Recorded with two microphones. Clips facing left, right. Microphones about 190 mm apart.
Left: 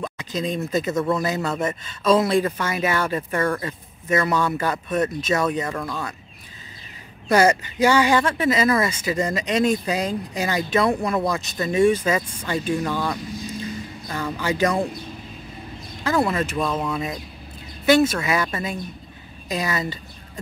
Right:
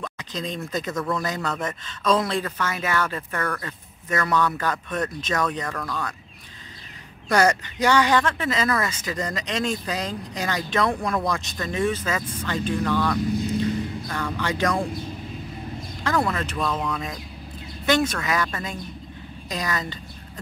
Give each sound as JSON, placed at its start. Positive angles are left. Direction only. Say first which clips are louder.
{"t": 0.0, "sound": "a sound", "louder": "left 5 dB", "side_deg": 10}
{"t": 0.7, "sound": "speech", "louder": "left 5 dB", "side_deg": 10}
{"t": 0.9, "sound": "speech", "louder": "left 3 dB", "side_deg": 20}
{"t": 1.2, "sound": "speech", "louder": "left 4 dB", "side_deg": 10}
{"t": 7.2, "sound": "speech", "louder": "left 3 dB", "side_deg": 10}
{"t": 16.0, "sound": "speech", "louder": "left 3 dB", "side_deg": 10}